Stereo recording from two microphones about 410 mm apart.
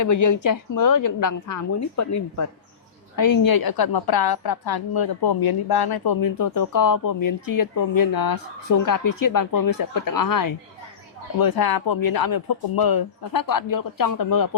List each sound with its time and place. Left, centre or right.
0.0 s a woman's voice: left
3.2 s a woman's voice: left